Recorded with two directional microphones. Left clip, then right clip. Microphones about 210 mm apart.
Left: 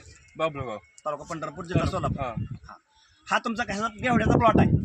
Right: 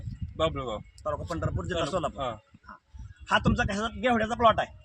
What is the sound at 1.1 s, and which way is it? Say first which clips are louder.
Speech: right 1 dB; 15° right (ahead or behind).